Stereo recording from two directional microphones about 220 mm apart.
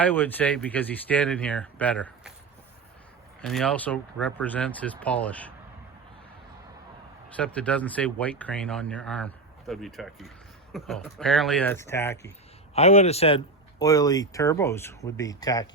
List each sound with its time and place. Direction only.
0.0 s speech: 10° left (ahead or behind)
3.4 s speech: 5° left (ahead or behind)
7.3 s speech: 5° left (ahead or behind)
12.7 s speech: 30° left (ahead or behind)